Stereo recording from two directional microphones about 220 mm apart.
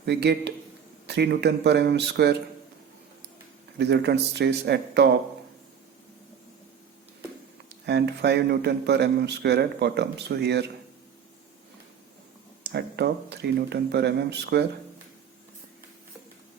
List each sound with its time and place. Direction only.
0.0 s a man's voice: 50° right (ahead or behind)
3.8 s a man's voice: 50° right (ahead or behind)
7.9 s a man's voice: 50° right (ahead or behind)
12.6 s a man's voice: 50° right (ahead or behind)